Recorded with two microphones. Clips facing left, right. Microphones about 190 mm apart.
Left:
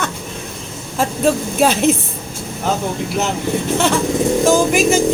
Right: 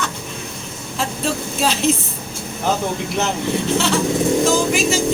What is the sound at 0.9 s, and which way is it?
Speech, 50° left (ahead or behind).